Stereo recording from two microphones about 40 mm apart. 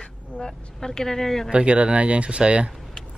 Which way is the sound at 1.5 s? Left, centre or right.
Right.